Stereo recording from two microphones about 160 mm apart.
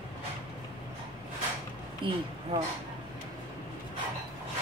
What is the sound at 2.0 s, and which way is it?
Speech, 30° right (ahead or behind).